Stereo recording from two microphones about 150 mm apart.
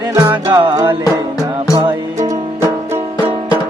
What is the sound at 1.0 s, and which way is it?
Music, 25° left (ahead or behind).